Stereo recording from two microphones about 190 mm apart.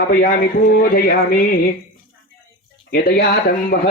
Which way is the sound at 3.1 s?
55° left (ahead or behind).